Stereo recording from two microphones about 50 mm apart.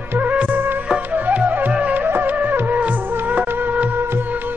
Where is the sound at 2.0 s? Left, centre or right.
Right.